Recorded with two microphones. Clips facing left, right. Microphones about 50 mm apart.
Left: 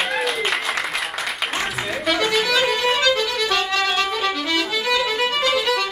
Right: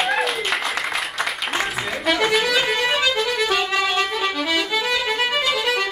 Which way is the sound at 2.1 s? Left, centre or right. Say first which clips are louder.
Even; centre.